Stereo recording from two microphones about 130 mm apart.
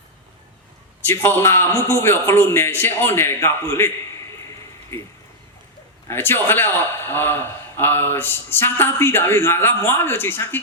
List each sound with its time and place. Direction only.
1.0 s a man's voice: 15° left (ahead or behind)
6.1 s a man's voice: 15° left (ahead or behind)